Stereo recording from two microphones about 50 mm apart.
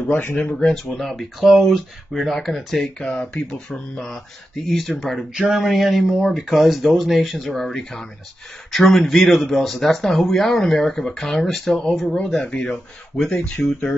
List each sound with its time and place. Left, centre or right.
0.1 s speech: left
0.5 s speech: centre
1.4 s speech: centre
3.0 s speech: centre
4.6 s speech: centre
5.3 s speech: centre
5.6 s speech: centre